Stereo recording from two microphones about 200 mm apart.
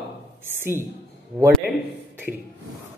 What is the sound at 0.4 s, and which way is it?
Speech, 10° right (ahead or behind).